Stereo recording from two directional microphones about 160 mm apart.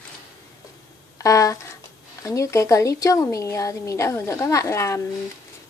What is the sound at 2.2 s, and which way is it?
A woman's voice, 20° left (ahead or behind).